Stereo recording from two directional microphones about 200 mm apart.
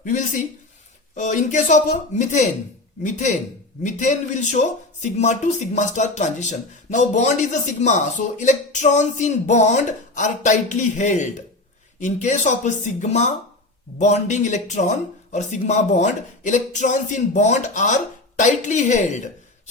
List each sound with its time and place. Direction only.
0.0 s speech: 40° left (ahead or behind)